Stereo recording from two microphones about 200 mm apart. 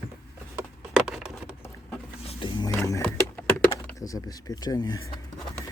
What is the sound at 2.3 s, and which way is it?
Roaring cats, 25° left (ahead or behind).